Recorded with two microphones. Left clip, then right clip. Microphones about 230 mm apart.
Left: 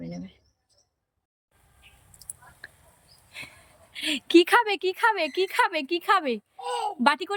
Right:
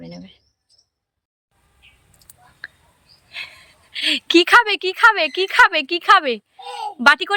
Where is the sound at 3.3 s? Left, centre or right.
Centre.